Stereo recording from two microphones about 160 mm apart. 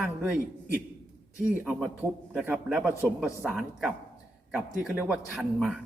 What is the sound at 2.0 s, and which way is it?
A man's voice, 10° right (ahead or behind).